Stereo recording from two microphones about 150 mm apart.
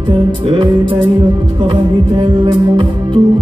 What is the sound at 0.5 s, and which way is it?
Music, 35° right (ahead or behind).